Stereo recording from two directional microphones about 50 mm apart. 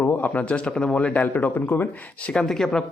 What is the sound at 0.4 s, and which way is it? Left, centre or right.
Speech, left.